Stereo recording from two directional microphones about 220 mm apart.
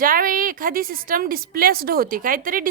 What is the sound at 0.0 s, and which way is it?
A woman's voice, 40° right (ahead or behind).